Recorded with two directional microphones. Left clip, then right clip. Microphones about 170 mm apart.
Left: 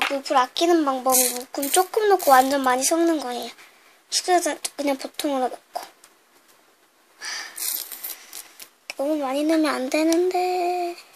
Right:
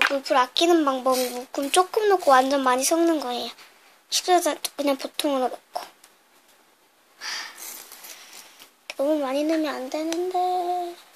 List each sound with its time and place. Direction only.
0.1 s speech: centre (ahead or behind)
7.2 s a sound: 5° right (ahead or behind)
8.8 s speech: 5° right (ahead or behind)
9.6 s child singing: 20° left (ahead or behind)